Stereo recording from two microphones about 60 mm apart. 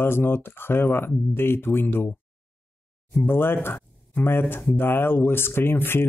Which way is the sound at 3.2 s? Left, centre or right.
Left.